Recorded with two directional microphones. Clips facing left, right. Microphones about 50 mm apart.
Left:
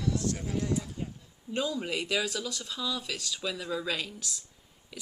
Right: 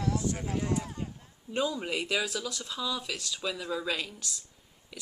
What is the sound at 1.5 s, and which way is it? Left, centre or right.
Speech, centre.